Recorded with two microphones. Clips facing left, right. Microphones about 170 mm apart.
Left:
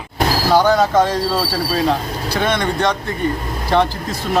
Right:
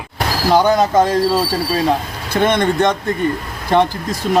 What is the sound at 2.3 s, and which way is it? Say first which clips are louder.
Speech: right 4 dB; 50° right (ahead or behind).